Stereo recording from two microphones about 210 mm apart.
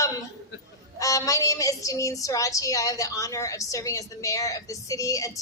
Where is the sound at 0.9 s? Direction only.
15° left (ahead or behind).